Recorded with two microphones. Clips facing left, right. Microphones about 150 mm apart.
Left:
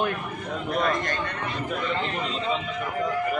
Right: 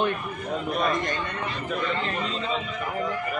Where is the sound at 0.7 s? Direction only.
20° right (ahead or behind).